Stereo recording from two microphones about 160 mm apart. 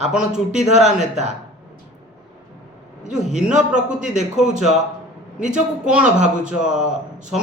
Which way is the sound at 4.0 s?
50° right (ahead or behind).